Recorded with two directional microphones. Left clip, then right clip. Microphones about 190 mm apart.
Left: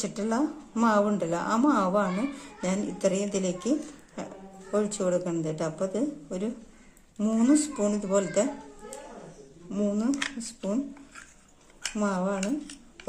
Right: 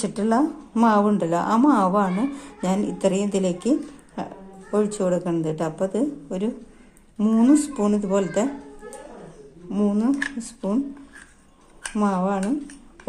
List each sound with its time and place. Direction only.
0.0 s a woman's voice: 25° right (ahead or behind)
9.7 s a woman's voice: 20° right (ahead or behind)
12.0 s a woman's voice: 20° right (ahead or behind)